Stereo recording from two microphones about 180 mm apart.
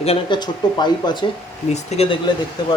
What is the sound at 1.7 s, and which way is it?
Speech, 35° left (ahead or behind).